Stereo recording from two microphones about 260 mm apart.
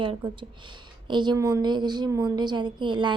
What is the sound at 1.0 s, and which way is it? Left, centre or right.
A woman's voice, centre.